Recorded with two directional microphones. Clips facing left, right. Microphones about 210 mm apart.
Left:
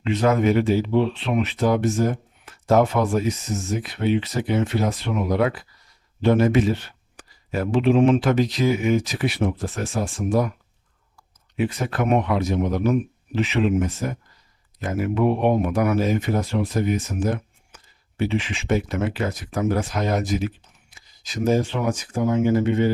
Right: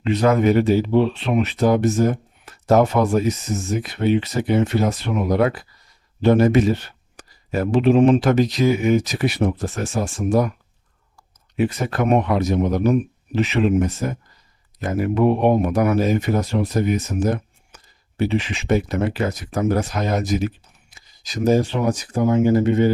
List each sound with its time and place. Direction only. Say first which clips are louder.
0.0 s speech: right 3 dB; 40° right (ahead or behind)